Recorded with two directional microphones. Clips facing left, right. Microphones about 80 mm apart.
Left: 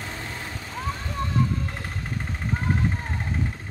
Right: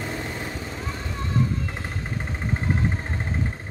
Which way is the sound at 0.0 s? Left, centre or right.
Centre.